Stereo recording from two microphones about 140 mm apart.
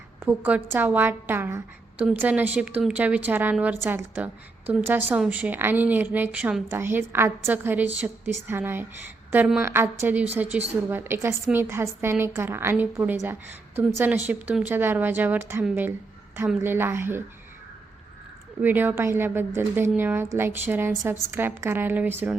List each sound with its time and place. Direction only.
0.2 s a woman's voice: 15° right (ahead or behind)
18.6 s a woman's voice: 15° right (ahead or behind)